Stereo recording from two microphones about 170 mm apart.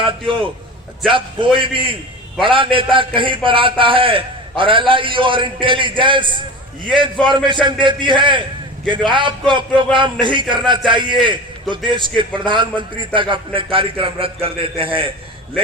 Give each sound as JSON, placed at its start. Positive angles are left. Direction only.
{"t": 0.0, "sound": "a man's voice", "side_deg": -30}